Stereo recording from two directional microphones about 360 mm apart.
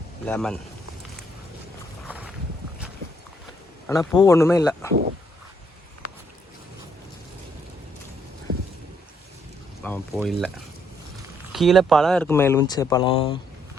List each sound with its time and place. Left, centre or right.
0.3 s speech: centre
2.0 s boat: centre
3.8 s speech: centre
8.5 s boat: right
9.8 s speech: centre
11.5 s speech: centre